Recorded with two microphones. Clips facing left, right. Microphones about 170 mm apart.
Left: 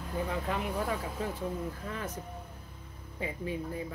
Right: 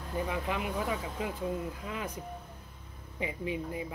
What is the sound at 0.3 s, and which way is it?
Speech, 10° right (ahead or behind).